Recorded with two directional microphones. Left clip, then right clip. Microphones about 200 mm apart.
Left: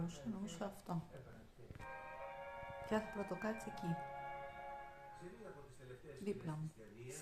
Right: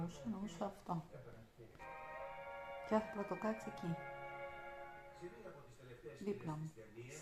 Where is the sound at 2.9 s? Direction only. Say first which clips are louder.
Right 3 dB; 5° left (ahead or behind).